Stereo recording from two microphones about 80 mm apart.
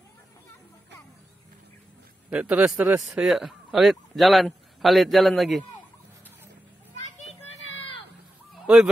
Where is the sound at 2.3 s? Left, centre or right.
Centre.